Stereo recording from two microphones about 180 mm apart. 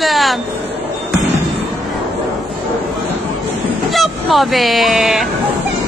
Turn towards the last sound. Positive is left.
turn(degrees=0)  # may be behind; listen again after turning